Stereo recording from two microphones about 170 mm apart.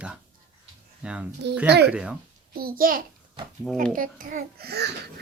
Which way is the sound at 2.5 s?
60° right (ahead or behind).